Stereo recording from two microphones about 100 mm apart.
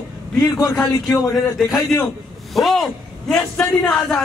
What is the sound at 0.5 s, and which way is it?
Speech, 30° left (ahead or behind).